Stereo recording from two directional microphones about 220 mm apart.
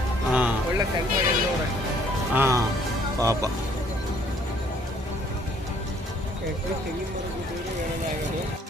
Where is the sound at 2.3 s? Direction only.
10° right (ahead or behind).